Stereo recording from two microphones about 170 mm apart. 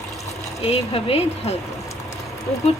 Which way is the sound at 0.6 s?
35° left (ahead or behind).